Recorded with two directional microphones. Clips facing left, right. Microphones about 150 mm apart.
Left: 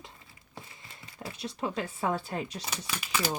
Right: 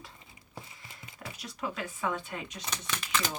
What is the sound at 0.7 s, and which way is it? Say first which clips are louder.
Speech: left 1 dB; 25° left (ahead or behind).